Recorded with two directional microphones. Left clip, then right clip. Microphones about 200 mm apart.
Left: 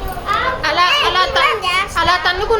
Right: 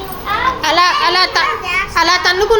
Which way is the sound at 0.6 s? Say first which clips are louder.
Right 2 dB; 35° right (ahead or behind).